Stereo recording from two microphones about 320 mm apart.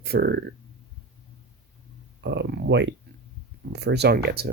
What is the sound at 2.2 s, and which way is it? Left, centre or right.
Speech, right.